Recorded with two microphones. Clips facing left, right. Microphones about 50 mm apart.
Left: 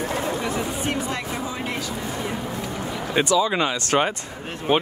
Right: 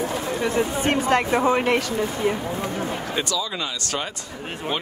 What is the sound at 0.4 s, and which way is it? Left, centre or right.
Speech, right.